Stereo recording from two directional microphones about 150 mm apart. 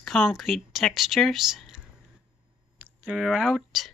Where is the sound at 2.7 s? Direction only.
10° right (ahead or behind).